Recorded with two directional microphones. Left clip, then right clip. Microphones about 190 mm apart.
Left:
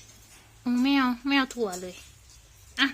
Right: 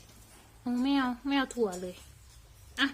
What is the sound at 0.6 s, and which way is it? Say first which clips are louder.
Speech: left 5 dB; 15° left (ahead or behind).